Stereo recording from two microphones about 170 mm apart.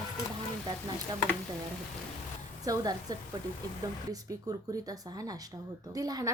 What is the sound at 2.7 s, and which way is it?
Speech, 20° right (ahead or behind).